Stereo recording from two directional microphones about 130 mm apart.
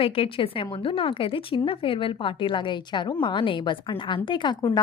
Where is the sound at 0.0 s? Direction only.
45° left (ahead or behind).